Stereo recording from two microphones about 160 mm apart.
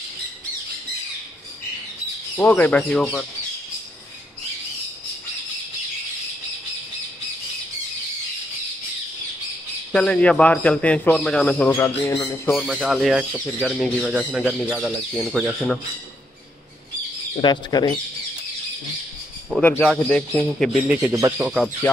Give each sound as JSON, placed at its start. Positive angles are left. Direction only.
{"t": 2.3, "sound": "a man's voice", "side_deg": 10}
{"t": 9.9, "sound": "a man's voice", "side_deg": 5}
{"t": 12.0, "sound": "speech", "side_deg": 25}
{"t": 12.4, "sound": "speech", "side_deg": 5}
{"t": 17.4, "sound": "speech", "side_deg": 25}
{"t": 19.6, "sound": "speech", "side_deg": 5}
{"t": 21.1, "sound": "speech", "side_deg": -20}